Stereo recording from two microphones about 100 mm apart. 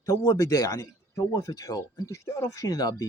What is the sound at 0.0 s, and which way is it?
Speech, 35° left (ahead or behind).